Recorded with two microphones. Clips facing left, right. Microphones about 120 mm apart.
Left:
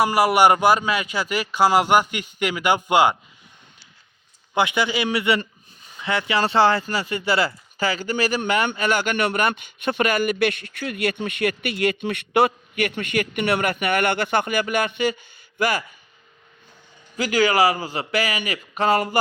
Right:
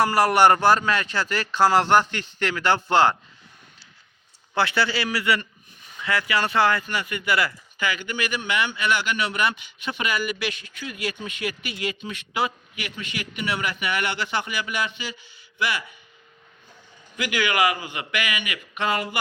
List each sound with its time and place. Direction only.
0.0 s speech: 10° left (ahead or behind)
4.5 s a man's voice: 15° left (ahead or behind); by 15.8 s 45° left (ahead or behind)
17.2 s a man's voice: 35° left (ahead or behind)